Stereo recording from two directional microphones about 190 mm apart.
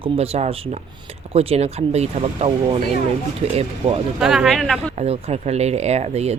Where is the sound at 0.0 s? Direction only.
30° right (ahead or behind).